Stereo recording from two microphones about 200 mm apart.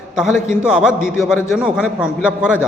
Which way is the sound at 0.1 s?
Centre (ahead or behind).